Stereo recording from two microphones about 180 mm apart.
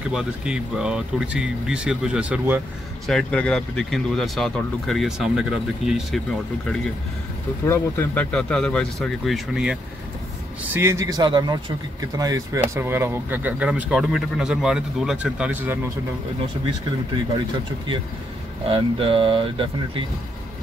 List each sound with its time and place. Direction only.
0.1 s speech: 5° right (ahead or behind)
3.1 s speech: 5° left (ahead or behind)
7.6 s speech: 10° left (ahead or behind)
10.7 s speech: 15° right (ahead or behind)
18.7 s speech: 30° right (ahead or behind)